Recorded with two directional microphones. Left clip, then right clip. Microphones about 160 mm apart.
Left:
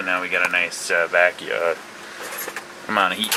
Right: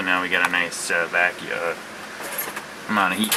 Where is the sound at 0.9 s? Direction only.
10° left (ahead or behind).